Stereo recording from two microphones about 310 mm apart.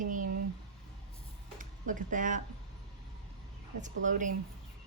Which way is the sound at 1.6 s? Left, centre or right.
Right.